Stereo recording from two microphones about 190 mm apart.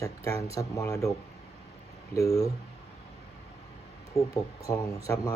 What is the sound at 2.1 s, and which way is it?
Speech, 15° left (ahead or behind).